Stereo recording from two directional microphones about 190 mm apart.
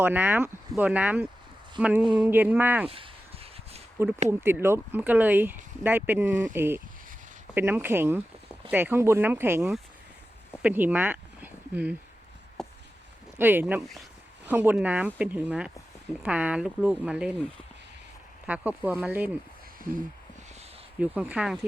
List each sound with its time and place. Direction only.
0.0 s speech: 10° right (ahead or behind)
2.8 s a sound: 30° right (ahead or behind)
4.3 s speech: 10° right (ahead or behind)
12.6 s a sound: 5° left (ahead or behind)
13.4 s speech: 10° right (ahead or behind)
18.4 s speech: 5° right (ahead or behind)
19.8 s speech: 45° right (ahead or behind)
21.0 s speech: 5° right (ahead or behind)